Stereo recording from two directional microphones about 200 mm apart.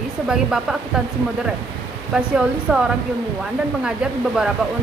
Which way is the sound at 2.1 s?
5° right (ahead or behind).